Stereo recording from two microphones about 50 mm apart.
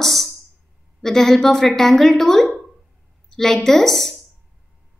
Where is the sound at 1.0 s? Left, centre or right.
Centre.